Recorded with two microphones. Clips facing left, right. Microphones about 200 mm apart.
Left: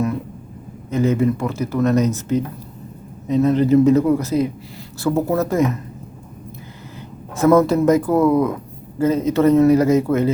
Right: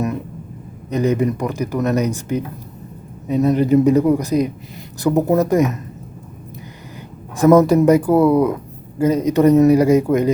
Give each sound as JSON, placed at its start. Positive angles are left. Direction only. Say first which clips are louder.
{"t": 0.9, "sound": "speech", "louder": "even", "side_deg": -15}
{"t": 7.3, "sound": "speech", "louder": "right 3 dB", "side_deg": -15}